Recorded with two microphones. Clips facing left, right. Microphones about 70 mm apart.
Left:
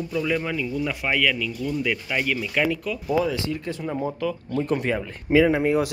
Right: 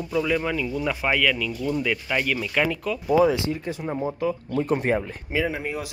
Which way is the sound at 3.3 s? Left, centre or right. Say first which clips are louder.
Right 1 dB; right.